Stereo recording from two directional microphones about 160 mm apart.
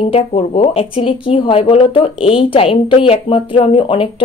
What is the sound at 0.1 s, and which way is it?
Speech, 40° left (ahead or behind).